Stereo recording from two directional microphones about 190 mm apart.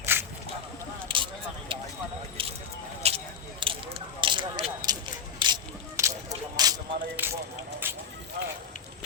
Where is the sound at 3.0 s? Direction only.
30° right (ahead or behind).